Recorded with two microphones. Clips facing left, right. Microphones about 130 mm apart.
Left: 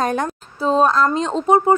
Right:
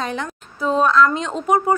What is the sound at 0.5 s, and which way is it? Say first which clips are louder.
Speech: even; 35° left (ahead or behind).